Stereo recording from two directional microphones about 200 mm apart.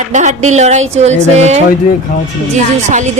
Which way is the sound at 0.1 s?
35° right (ahead or behind).